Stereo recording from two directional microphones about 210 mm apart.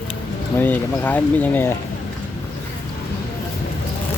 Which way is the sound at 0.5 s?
10° left (ahead or behind).